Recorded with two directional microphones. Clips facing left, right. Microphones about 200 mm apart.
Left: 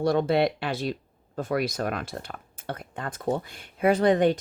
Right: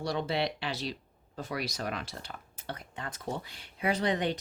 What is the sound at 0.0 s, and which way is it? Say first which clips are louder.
Speech: left 9 dB; 55° left (ahead or behind).